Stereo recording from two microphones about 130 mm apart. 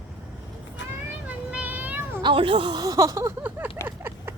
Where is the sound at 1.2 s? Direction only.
10° right (ahead or behind).